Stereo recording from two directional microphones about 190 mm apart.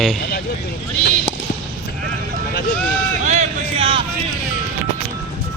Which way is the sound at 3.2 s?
40° right (ahead or behind).